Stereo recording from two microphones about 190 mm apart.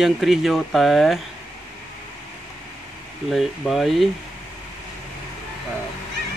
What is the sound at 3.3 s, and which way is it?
Speech, centre (ahead or behind).